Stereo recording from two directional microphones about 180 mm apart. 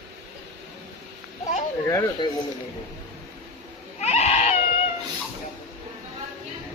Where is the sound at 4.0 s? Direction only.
35° left (ahead or behind).